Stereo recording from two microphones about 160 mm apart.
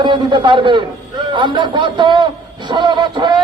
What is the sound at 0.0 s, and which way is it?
A man's voice, 30° right (ahead or behind).